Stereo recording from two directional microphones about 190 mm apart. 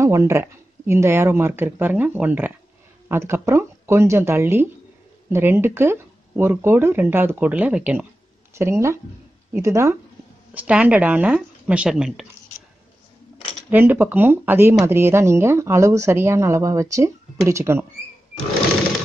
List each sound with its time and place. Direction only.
0.0 s speech: 15° right (ahead or behind)
13.7 s speech: 10° right (ahead or behind)